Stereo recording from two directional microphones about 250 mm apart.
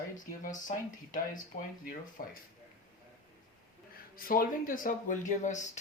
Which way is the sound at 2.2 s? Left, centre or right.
Left.